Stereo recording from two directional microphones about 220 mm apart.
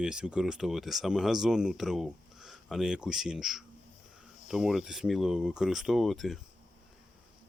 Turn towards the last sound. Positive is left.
turn(degrees=0)  # may be behind; listen again after turning